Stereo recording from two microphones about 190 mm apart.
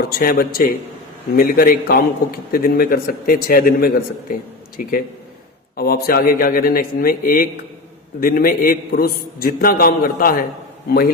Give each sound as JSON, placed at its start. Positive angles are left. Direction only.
{"t": 0.0, "sound": "a man's voice", "side_deg": 50}